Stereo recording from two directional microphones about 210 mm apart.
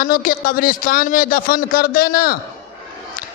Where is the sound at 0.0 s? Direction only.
40° left (ahead or behind).